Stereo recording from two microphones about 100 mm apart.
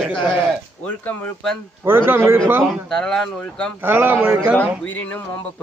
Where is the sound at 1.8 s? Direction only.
20° right (ahead or behind).